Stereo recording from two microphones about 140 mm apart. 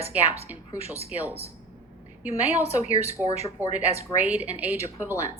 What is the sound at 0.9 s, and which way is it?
Speech, 15° right (ahead or behind).